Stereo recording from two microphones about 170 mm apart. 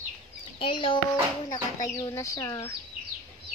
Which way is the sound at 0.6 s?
30° left (ahead or behind).